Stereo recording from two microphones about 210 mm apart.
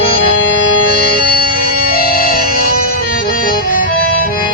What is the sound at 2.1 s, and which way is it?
Music, 45° left (ahead or behind).